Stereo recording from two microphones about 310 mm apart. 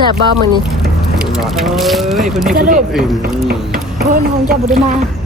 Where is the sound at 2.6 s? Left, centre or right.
Right.